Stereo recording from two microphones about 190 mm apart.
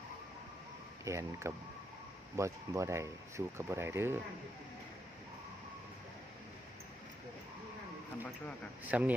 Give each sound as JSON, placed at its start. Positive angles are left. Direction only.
{"t": 1.0, "sound": "speech", "side_deg": -15}
{"t": 8.9, "sound": "speech", "side_deg": -5}